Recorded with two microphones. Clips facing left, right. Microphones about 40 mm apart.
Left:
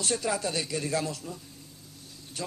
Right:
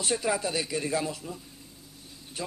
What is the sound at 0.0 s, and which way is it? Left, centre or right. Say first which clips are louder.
Speech: right 1 dB; centre.